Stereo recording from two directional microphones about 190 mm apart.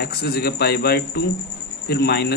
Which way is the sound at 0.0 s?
60° left (ahead or behind).